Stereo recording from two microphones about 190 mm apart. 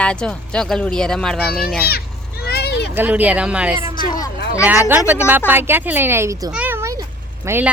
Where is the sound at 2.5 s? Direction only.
60° left (ahead or behind).